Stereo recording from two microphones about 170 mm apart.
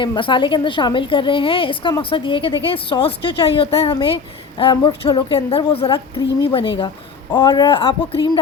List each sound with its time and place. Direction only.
0.0 s a woman's voice: 30° left (ahead or behind)